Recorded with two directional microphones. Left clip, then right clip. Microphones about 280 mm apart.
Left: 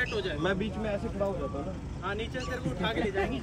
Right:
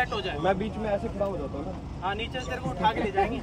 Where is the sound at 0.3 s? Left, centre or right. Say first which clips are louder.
Right 4 dB; right.